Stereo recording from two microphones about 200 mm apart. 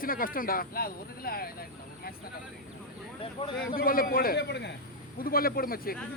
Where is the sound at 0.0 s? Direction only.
45° left (ahead or behind).